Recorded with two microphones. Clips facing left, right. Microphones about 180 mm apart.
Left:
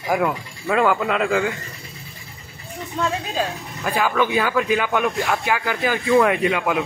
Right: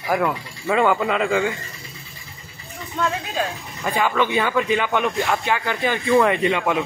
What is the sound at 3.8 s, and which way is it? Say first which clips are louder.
Speech: even; 5° left (ahead or behind).